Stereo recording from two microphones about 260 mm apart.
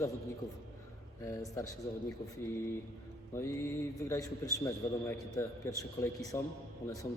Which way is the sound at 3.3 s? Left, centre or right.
Centre.